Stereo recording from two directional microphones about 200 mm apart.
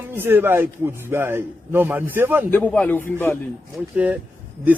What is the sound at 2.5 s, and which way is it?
Speech, 10° left (ahead or behind).